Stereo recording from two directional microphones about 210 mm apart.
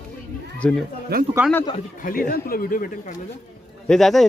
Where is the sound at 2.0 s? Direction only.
45° left (ahead or behind).